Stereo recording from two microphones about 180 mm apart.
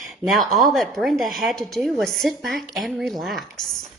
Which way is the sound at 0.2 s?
Centre (ahead or behind).